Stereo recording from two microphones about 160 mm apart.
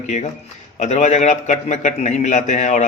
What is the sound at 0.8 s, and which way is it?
Speech, 45° left (ahead or behind).